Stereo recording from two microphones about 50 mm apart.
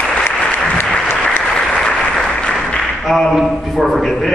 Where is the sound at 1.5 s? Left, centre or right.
Centre.